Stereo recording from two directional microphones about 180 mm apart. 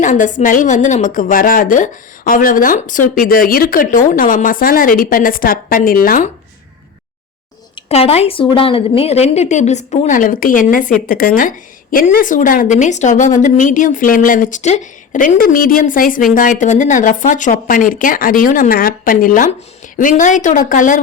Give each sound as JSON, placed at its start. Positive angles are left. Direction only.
{"t": 0.0, "sound": "a woman's voice", "side_deg": 45}
{"t": 7.8, "sound": "a woman's voice", "side_deg": 35}